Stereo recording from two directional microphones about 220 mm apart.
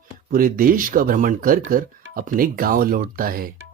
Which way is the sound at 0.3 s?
40° right (ahead or behind).